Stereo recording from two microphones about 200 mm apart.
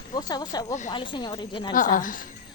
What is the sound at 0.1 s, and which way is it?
A woman's voice, 20° left (ahead or behind).